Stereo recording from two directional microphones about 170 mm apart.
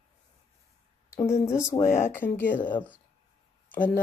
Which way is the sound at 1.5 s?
15° left (ahead or behind).